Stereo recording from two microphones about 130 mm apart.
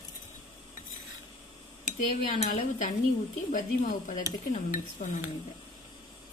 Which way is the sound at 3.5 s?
85° left.